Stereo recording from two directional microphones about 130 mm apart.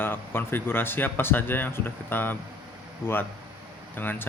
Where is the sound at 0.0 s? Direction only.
15° left (ahead or behind).